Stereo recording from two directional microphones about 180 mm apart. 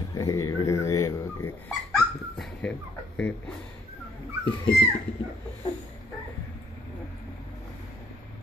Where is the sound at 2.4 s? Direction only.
5° left (ahead or behind).